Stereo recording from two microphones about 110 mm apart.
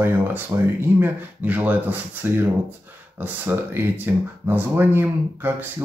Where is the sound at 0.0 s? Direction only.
20° right (ahead or behind).